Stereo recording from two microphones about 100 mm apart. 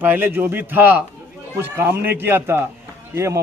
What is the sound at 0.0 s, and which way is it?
A man's voice, 20° right (ahead or behind).